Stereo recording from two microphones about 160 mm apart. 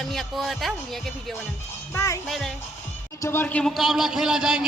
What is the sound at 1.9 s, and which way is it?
Speech, 20° left (ahead or behind).